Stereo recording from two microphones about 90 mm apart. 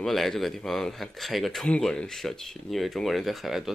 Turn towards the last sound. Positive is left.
turn(degrees=0)  # may be behind; listen again after turning